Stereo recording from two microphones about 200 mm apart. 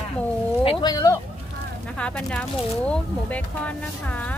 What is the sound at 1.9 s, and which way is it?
Speech, 5° left (ahead or behind).